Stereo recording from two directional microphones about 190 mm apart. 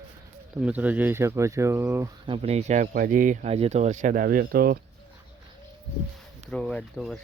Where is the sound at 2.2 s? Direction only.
30° right (ahead or behind); by 4.8 s 50° right (ahead or behind).